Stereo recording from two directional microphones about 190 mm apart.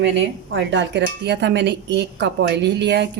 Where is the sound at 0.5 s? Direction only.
70° right (ahead or behind).